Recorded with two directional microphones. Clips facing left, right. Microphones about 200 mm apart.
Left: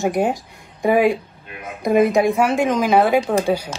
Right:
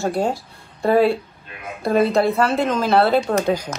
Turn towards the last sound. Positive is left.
turn(degrees=10)  # may be behind; listen again after turning